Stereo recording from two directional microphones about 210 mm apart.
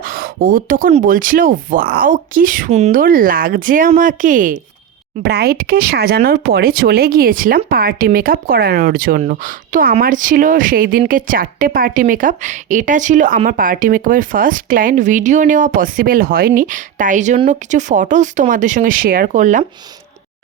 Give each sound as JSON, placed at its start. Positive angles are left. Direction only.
{"t": 0.0, "sound": "speech", "side_deg": -45}
{"t": 5.2, "sound": "speech", "side_deg": -50}